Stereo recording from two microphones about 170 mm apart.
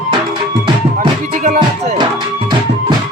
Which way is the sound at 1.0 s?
45° right (ahead or behind).